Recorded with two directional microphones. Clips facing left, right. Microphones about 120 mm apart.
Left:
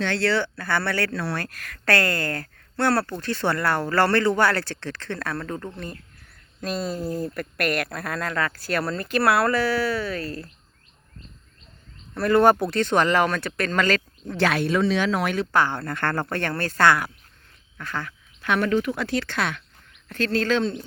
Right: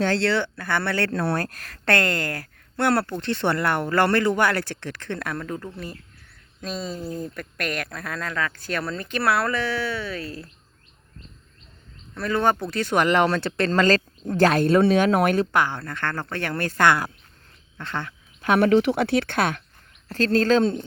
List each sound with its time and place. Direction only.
0.2 s speech: 20° right (ahead or behind)
1.1 s speech: 50° right (ahead or behind)
1.8 s speech: 20° right (ahead or behind); by 10.5 s centre (ahead or behind)
12.1 s speech: 5° left (ahead or behind)
12.7 s speech: 10° right (ahead or behind); by 15.4 s 50° right (ahead or behind)
15.7 s speech: 5° left (ahead or behind)
16.4 s speech: 15° right (ahead or behind)
18.4 s speech: 55° right (ahead or behind)
20.1 s speech: 35° right (ahead or behind)